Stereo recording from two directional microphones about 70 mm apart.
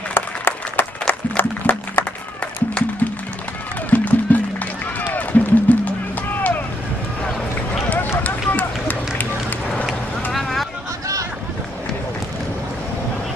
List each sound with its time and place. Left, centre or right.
0.1 s applause: left
1.3 s a sound: left
2.4 s music: centre
8.2 s run: left
10.3 s boat: centre